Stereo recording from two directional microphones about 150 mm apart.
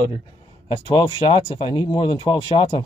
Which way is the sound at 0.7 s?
35° left (ahead or behind).